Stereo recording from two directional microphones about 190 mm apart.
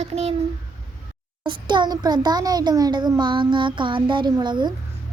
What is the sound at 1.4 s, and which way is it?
A child's voice, 25° right (ahead or behind).